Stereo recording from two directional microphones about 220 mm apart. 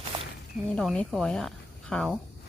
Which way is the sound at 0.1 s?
20° right (ahead or behind).